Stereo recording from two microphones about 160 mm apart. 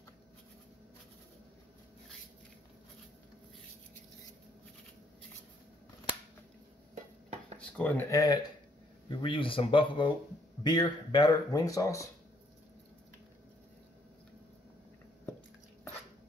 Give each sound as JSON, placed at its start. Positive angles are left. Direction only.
{"t": 7.5, "sound": "speech", "side_deg": 10}
{"t": 9.1, "sound": "speech", "side_deg": 35}